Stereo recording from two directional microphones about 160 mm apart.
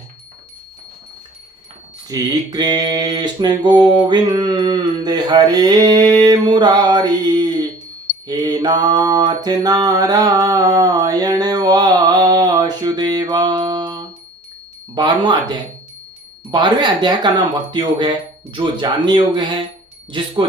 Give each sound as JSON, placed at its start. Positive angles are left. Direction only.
{"t": 2.0, "sound": "mantra", "side_deg": -25}
{"t": 20.1, "sound": "speech", "side_deg": -30}